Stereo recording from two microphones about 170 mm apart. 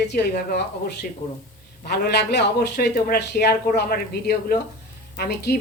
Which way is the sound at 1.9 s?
70° left (ahead or behind).